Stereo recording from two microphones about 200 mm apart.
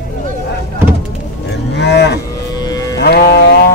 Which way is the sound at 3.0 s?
50° left (ahead or behind).